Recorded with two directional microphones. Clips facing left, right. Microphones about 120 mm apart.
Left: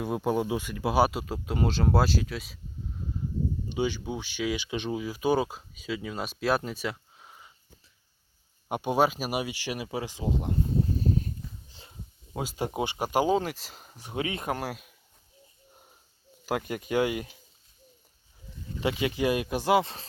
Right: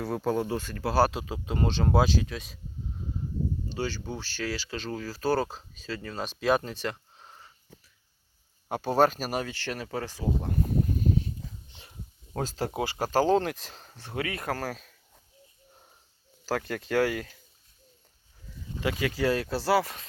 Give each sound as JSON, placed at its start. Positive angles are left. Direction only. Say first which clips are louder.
{"t": 0.0, "sound": "speech", "louder": "left 1 dB", "side_deg": 15}
{"t": 3.7, "sound": "speech", "louder": "left 3 dB", "side_deg": 15}
{"t": 8.7, "sound": "speech", "louder": "right 1 dB", "side_deg": 15}
{"t": 11.0, "sound": "a sound", "louder": "right 1 dB", "side_deg": 40}
{"t": 12.3, "sound": "speech", "louder": "right 1 dB", "side_deg": 10}
{"t": 16.5, "sound": "speech", "louder": "even", "side_deg": 15}
{"t": 18.8, "sound": "speech", "louder": "left 1 dB", "side_deg": 25}